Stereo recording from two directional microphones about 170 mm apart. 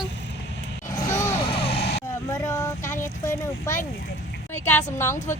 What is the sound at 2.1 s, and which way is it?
Speech, 15° left (ahead or behind).